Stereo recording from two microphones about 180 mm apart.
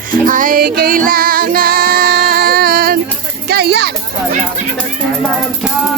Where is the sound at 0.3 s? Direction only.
50° right (ahead or behind).